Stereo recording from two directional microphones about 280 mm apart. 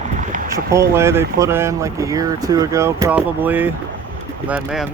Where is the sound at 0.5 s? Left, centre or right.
Centre.